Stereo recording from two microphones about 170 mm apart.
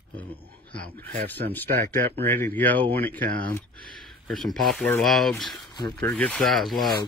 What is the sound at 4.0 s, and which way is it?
Speech, centre (ahead or behind).